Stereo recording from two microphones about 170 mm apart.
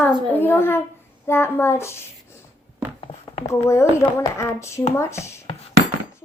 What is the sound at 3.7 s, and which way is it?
A child's voice, 15° left (ahead or behind).